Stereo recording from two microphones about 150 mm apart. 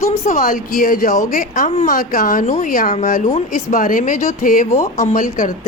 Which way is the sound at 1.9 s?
65° left (ahead or behind).